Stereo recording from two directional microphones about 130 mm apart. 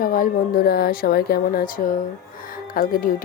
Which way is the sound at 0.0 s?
90° left.